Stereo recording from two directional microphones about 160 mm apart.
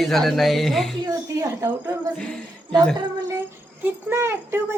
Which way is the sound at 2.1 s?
5° left (ahead or behind).